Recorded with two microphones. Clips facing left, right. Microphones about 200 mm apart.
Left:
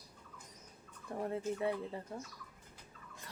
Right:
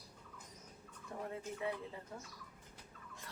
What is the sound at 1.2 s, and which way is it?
Fowl, 35° left (ahead or behind).